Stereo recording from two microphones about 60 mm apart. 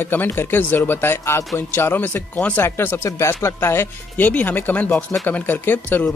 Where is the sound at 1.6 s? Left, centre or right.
Left.